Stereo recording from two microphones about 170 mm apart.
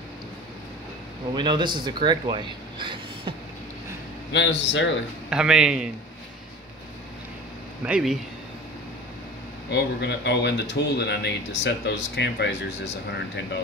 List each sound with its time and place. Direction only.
1.3 s speech: 25° right (ahead or behind)
4.3 s speech: 90° left
5.3 s speech: 5° right (ahead or behind)
7.8 s speech: 5° right (ahead or behind)
9.7 s speech: 85° left